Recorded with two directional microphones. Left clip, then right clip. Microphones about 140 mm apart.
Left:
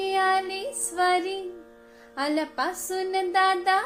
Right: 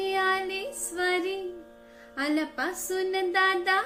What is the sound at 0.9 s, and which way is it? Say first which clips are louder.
Music: left 4 dB; 60° right (ahead or behind).